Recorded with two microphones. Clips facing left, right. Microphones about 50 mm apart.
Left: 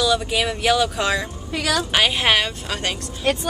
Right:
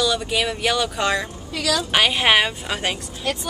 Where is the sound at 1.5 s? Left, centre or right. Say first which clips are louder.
Left 1 dB; left.